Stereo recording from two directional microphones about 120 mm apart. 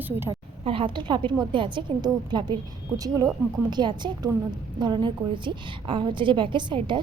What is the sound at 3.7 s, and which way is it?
A woman's voice, 40° right (ahead or behind).